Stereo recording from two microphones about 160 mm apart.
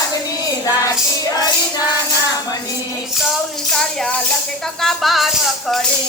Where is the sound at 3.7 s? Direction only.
5° left (ahead or behind).